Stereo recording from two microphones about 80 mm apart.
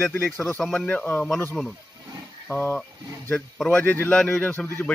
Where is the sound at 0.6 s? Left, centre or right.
Centre.